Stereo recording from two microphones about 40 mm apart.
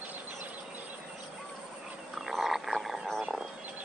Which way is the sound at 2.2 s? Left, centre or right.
Centre.